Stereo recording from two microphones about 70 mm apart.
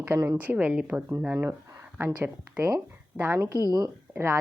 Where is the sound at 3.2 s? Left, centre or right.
Right.